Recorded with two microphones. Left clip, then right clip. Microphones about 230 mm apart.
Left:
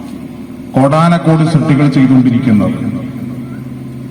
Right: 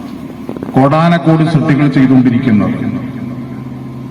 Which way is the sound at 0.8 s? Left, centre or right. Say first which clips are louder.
Even; left.